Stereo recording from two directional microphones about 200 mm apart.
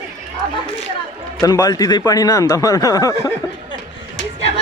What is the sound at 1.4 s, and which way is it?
Speech, 15° left (ahead or behind).